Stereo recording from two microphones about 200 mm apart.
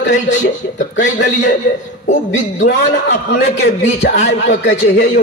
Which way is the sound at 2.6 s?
60° left (ahead or behind).